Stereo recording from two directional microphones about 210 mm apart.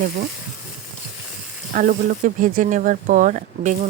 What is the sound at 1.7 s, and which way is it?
Speech, 40° right (ahead or behind).